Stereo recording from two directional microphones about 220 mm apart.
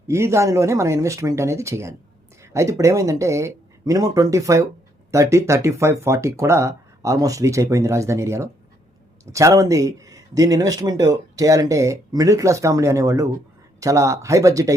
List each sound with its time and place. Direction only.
0.1 s speech: 10° right (ahead or behind)